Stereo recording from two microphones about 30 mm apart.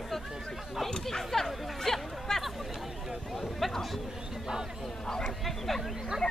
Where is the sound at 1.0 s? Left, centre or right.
Centre.